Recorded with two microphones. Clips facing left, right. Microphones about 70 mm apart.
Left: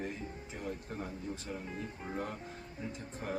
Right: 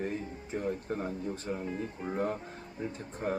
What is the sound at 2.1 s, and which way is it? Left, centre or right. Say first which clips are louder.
Speech: right 8 dB; right.